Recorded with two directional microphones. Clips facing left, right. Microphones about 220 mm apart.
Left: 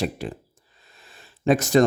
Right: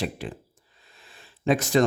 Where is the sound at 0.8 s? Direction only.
40° left (ahead or behind).